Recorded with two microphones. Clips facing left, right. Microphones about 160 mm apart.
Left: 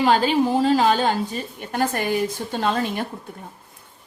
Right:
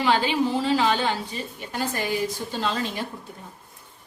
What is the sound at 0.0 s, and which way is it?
A woman's voice, 45° left (ahead or behind).